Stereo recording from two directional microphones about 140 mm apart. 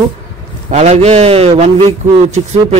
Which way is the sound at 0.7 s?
55° right (ahead or behind).